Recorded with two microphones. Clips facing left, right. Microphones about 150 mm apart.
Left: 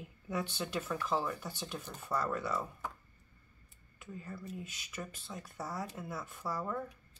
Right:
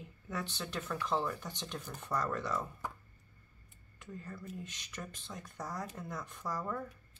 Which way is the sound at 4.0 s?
5° left (ahead or behind).